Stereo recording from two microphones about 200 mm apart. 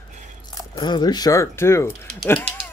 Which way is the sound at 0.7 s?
20° left (ahead or behind).